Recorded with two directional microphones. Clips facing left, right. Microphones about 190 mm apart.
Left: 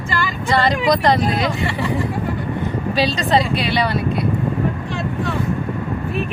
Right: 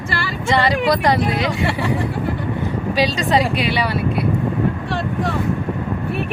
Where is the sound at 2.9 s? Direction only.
15° right (ahead or behind).